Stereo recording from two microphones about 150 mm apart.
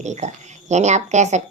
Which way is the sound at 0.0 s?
50° right (ahead or behind).